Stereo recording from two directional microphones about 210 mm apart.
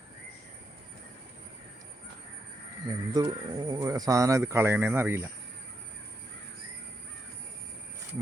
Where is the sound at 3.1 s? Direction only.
20° right (ahead or behind).